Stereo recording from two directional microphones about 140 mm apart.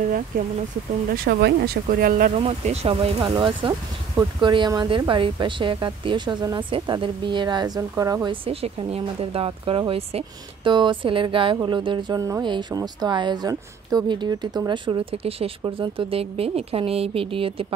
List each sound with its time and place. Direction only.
1.1 s speech: 90° right
2.3 s speech: 50° right (ahead or behind); by 8.4 s 25° right (ahead or behind)
8.5 s speech: 45° right (ahead or behind)